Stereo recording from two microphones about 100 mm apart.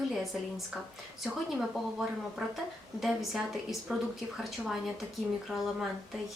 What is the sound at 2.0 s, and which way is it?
A woman's voice, 5° right (ahead or behind).